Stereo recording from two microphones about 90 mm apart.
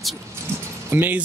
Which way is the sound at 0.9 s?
20° right (ahead or behind).